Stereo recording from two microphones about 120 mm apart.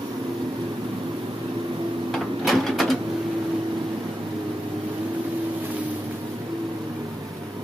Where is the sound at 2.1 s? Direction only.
Centre (ahead or behind).